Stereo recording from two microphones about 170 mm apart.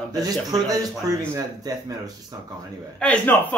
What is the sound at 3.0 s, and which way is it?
Speech, 10° left (ahead or behind).